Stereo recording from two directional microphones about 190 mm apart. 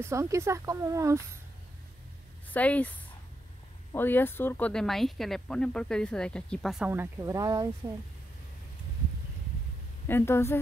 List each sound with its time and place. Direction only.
0.0 s speech: 15° right (ahead or behind)
2.5 s a woman's voice: 10° left (ahead or behind)
3.9 s speech: 10° left (ahead or behind)
6.9 s speech: 15° right (ahead or behind)
10.0 s a woman's voice: 10° left (ahead or behind)